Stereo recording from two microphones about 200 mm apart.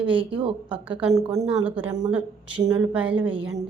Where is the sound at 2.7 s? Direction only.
5° right (ahead or behind).